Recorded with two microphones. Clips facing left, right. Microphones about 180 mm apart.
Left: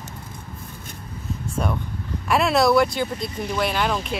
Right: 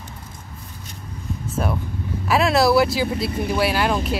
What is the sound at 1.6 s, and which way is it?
Speech, 5° right (ahead or behind).